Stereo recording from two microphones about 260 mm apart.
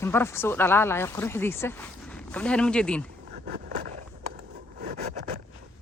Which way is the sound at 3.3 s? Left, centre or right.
Right.